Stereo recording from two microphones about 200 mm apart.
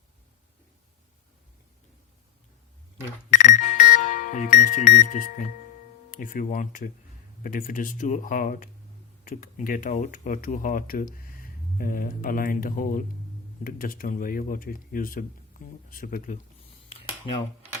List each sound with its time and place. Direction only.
3.2 s music: 40° left (ahead or behind)
6.1 s speech: 45° left (ahead or behind)